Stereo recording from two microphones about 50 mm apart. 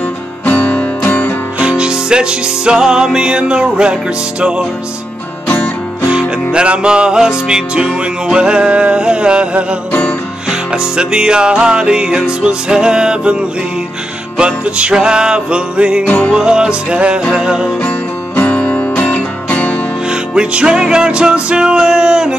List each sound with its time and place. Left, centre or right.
0.5 s music: left
1.6 s music: centre
6.0 s music: right
18.3 s music: left
20.1 s music: centre